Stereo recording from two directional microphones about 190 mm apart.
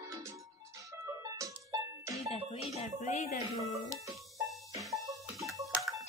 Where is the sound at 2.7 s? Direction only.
40° left (ahead or behind).